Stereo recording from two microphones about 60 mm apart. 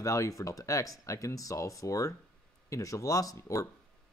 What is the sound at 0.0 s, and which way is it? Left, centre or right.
Speech, left.